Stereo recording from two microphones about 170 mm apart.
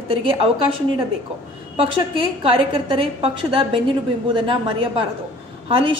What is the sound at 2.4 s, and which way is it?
Speech, 30° right (ahead or behind).